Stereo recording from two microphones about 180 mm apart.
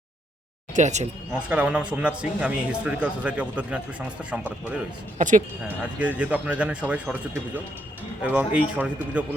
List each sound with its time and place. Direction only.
0.8 s speech: 40° right (ahead or behind)
1.3 s a man's voice: 5° right (ahead or behind)
5.1 s speech: 45° right (ahead or behind)
5.6 s a man's voice: 10° right (ahead or behind)